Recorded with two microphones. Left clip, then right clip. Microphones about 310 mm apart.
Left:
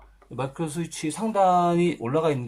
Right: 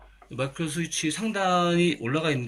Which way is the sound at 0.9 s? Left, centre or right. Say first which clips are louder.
Left 1 dB; centre.